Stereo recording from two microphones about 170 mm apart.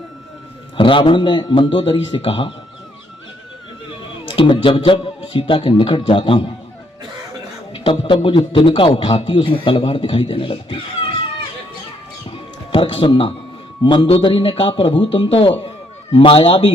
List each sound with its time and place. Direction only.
0.8 s a man's voice: 30° left (ahead or behind)
4.3 s a man's voice: 30° left (ahead or behind)
7.7 s a man's voice: 30° left (ahead or behind)
12.3 s music: 30° left (ahead or behind)
13.8 s a man's voice: 30° left (ahead or behind)